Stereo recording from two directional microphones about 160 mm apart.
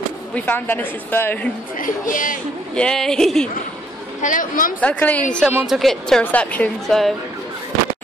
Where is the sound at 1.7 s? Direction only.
55° left (ahead or behind).